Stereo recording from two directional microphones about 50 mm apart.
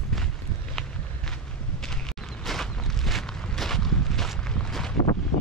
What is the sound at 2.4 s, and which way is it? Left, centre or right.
Walk, centre.